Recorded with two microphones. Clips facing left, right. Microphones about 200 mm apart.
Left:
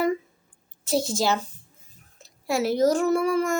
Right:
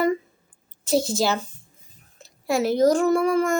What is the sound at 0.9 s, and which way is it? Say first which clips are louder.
A woman's voice: right 2 dB; centre (ahead or behind).